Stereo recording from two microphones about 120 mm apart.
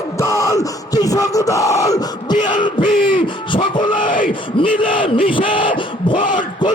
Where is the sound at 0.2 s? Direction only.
25° left (ahead or behind).